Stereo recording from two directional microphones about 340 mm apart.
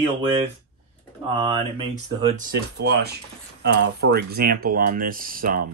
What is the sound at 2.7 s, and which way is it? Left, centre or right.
Speech, right.